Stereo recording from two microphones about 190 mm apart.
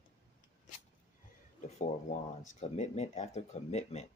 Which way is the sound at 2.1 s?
40° left (ahead or behind).